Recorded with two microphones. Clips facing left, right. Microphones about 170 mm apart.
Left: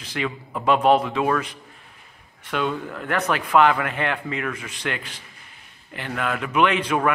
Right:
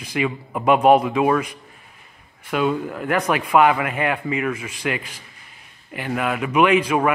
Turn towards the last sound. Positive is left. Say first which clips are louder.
# right 3 dB
turn(degrees=-10)  # may be behind; listen again after turning